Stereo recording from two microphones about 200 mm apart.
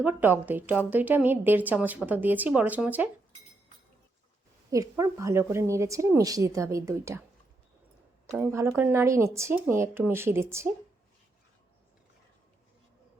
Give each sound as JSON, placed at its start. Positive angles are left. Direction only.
{"t": 0.0, "sound": "a woman's voice", "side_deg": -10}
{"t": 4.7, "sound": "a woman's voice", "side_deg": -15}
{"t": 8.4, "sound": "a woman's voice", "side_deg": -15}